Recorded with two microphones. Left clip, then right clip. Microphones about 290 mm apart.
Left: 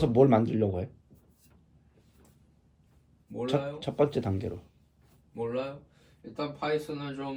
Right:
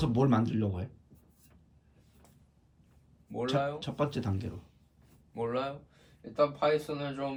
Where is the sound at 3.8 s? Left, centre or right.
Centre.